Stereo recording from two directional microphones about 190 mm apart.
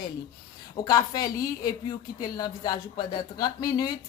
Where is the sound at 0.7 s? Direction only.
20° left (ahead or behind).